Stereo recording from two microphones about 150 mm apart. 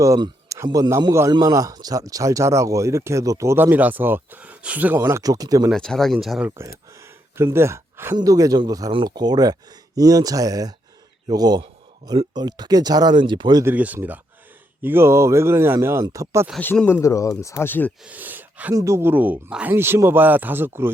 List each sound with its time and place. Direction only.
0.0 s a man's voice: 20° right (ahead or behind)
5.7 s speech: 5° left (ahead or behind)
7.3 s a man's voice: 15° right (ahead or behind)
13.7 s speech: 10° right (ahead or behind)
16.6 s speech: 10° left (ahead or behind)
18.0 s speech: 10° right (ahead or behind)
18.7 s speech: 20° right (ahead or behind)